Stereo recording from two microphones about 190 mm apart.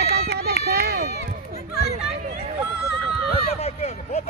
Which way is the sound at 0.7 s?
60° right (ahead or behind).